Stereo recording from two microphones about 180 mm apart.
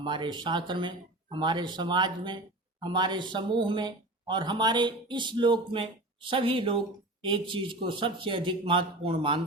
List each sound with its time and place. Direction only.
0.0 s speech: 25° right (ahead or behind)